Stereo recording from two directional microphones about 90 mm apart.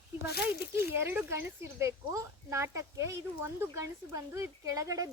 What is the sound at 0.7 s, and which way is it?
Speech, 30° right (ahead or behind).